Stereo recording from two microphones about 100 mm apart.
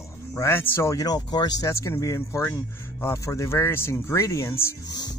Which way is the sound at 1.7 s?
30° left (ahead or behind).